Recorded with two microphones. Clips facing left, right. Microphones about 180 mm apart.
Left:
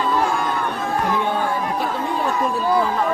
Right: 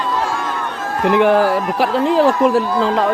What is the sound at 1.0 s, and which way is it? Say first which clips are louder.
Speech: right 13 dB; 90° right.